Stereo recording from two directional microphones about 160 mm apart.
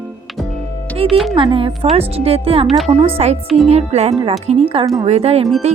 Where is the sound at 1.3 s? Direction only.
35° right (ahead or behind).